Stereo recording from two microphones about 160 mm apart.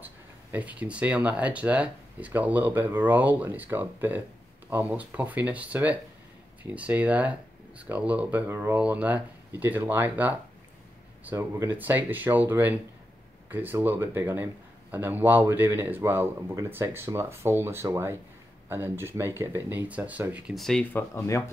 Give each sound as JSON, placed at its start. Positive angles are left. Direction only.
{"t": 0.0, "sound": "a man's voice", "side_deg": -10}
{"t": 20.9, "sound": "speech", "side_deg": 15}